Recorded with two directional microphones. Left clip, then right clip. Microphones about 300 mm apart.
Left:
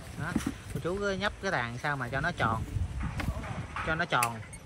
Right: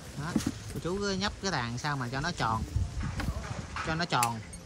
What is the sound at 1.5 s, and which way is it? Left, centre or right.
Speech, centre.